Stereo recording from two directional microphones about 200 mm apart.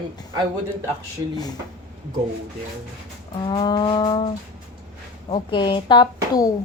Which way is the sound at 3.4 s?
25° left (ahead or behind).